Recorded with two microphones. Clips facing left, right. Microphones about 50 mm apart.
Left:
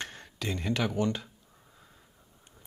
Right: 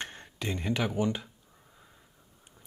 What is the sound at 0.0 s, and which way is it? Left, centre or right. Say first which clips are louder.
Speech: even; right.